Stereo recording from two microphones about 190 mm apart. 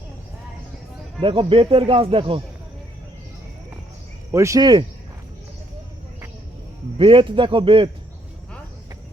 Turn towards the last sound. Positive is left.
turn(degrees=-25)  # may be behind; listen again after turning